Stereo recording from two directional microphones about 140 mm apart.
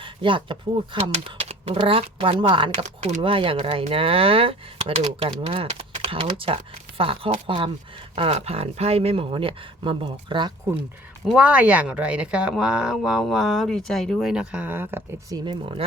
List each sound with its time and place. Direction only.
0.0 s speech: 35° right (ahead or behind)
1.1 s speech: 50° right (ahead or behind)
2.8 s speech: 55° right (ahead or behind)
3.2 s speech: 40° right (ahead or behind)
11.3 s speech: 10° right (ahead or behind)
15.3 s speech: 25° right (ahead or behind)